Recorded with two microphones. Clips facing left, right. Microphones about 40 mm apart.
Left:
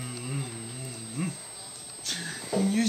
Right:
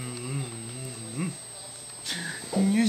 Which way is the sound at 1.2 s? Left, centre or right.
Centre.